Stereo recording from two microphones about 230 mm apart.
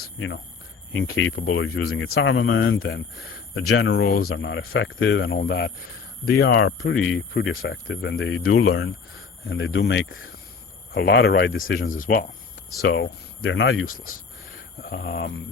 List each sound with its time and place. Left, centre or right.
0.0 s a sound: left
0.9 s speech: left
2.0 s speech: left
4.0 s speech: left
10.9 s speech: left
11.9 s speech: left
12.9 s speech: left
13.8 s speech: left
14.8 s speech: left